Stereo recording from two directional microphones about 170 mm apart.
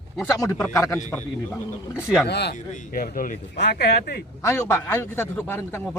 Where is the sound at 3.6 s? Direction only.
75° left (ahead or behind).